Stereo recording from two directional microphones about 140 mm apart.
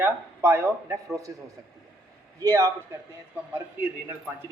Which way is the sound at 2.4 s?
20° right (ahead or behind).